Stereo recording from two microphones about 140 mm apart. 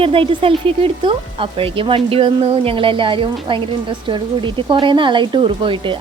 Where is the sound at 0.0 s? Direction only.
40° right (ahead or behind).